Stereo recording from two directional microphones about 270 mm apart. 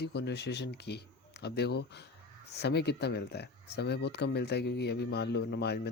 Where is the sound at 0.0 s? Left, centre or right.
Left.